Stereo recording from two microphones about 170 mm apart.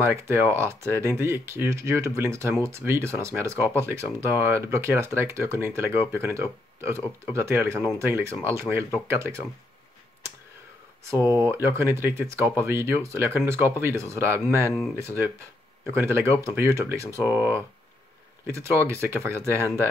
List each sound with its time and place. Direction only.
0.0 s speech: 15° right (ahead or behind)
11.2 s speech: 15° right (ahead or behind)